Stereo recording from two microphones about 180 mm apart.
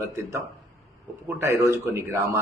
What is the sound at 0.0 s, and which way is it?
Speech, 15° right (ahead or behind).